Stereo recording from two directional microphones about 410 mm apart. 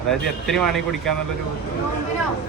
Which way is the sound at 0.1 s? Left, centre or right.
Centre.